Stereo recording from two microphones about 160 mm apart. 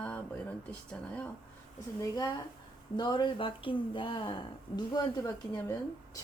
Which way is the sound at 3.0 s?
25° left (ahead or behind).